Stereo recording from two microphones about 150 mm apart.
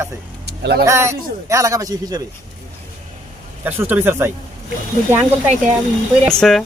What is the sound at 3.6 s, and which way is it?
Speech, 15° right (ahead or behind).